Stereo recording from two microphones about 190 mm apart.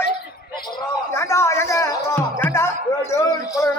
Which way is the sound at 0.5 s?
25° left (ahead or behind).